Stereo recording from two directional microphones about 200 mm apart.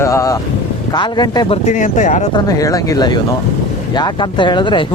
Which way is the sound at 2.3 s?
15° left (ahead or behind).